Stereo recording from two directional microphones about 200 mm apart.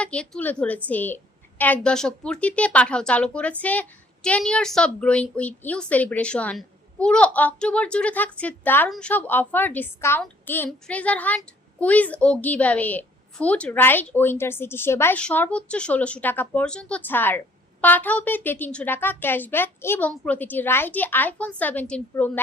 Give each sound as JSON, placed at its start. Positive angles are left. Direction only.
{"t": 0.0, "sound": "a woman's voice", "side_deg": 5}